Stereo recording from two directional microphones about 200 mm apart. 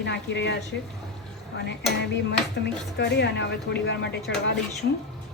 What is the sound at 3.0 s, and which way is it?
A woman's voice, 55° left (ahead or behind).